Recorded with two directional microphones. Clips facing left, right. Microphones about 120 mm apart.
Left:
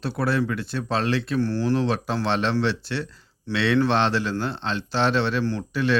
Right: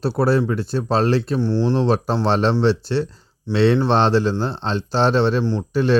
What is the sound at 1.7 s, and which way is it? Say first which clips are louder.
Speech: right 4 dB; 35° right (ahead or behind).